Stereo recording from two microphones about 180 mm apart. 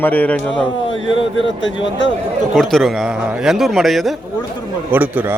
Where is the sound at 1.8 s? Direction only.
90° left.